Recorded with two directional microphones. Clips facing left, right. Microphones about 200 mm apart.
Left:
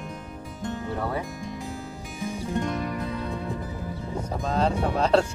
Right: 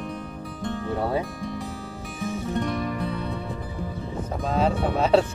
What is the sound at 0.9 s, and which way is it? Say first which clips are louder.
Music: right 5 dB; 25° right (ahead or behind).